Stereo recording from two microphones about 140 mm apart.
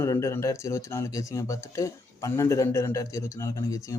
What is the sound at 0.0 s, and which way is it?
Speech, 20° left (ahead or behind).